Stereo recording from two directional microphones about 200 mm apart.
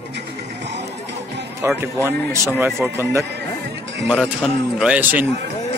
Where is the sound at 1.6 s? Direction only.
15° right (ahead or behind).